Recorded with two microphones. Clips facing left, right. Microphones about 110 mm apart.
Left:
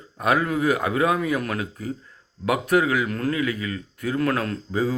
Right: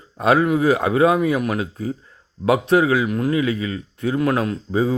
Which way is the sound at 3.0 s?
15° right (ahead or behind).